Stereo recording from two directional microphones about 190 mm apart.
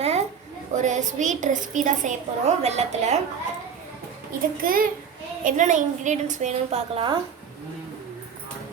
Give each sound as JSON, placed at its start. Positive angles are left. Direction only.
{"t": 0.0, "sound": "a sound", "side_deg": -35}
{"t": 0.7, "sound": "a woman's voice", "side_deg": -40}
{"t": 4.6, "sound": "a child's voice", "side_deg": -50}